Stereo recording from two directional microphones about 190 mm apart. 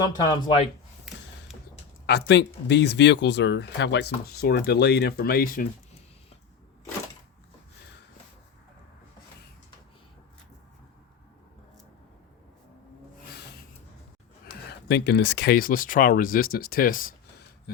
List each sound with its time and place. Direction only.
0.0 s speech: 25° left (ahead or behind)
2.0 s speech: 60° left (ahead or behind)
14.7 s speech: 60° left (ahead or behind)